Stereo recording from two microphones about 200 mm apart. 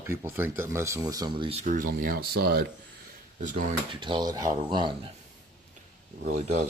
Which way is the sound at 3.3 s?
40° right (ahead or behind).